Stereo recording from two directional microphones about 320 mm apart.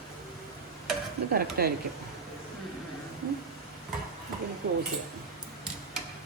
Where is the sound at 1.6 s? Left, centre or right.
Right.